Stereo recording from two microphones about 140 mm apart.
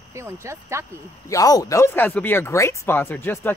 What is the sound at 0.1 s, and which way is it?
Speech, 20° right (ahead or behind).